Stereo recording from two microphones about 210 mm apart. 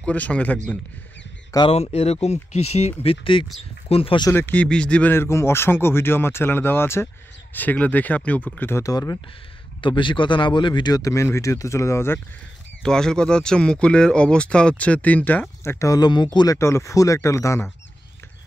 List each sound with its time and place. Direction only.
0.0 s speech: 5° left (ahead or behind)
1.5 s speech: 25° left (ahead or behind)
4.3 s speech: 10° left (ahead or behind)